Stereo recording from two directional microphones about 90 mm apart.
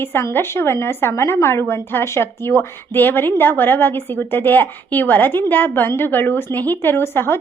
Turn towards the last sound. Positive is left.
turn(degrees=25)  # may be behind; listen again after turning